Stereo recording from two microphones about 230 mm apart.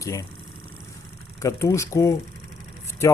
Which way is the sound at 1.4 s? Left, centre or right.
Centre.